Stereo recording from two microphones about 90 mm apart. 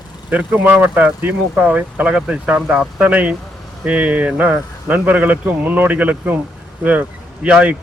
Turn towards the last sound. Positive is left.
turn(degrees=-15)  # may be behind; listen again after turning